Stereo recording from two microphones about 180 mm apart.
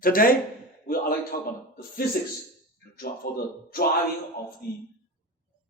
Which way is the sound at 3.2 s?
55° left (ahead or behind).